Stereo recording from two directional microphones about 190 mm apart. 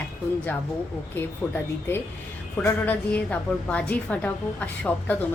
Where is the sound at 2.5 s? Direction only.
10° left (ahead or behind).